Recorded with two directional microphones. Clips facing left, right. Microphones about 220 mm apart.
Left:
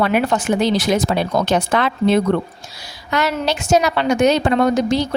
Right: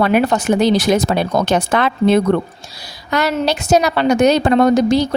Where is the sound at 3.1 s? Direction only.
35° right (ahead or behind).